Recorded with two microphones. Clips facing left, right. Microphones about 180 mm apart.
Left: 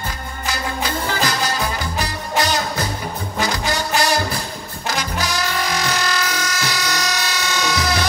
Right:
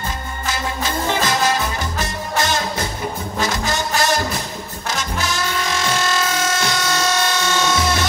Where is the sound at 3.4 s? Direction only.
20° right (ahead or behind).